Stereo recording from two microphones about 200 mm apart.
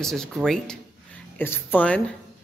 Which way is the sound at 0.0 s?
Centre (ahead or behind).